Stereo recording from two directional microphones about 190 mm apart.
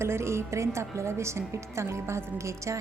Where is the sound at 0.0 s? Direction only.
15° right (ahead or behind).